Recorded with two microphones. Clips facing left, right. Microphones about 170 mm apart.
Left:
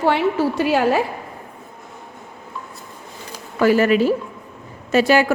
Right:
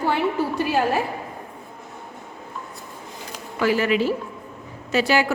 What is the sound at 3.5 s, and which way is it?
Speech, 50° left (ahead or behind).